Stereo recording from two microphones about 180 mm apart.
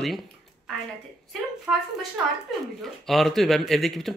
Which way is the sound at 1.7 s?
5° right (ahead or behind).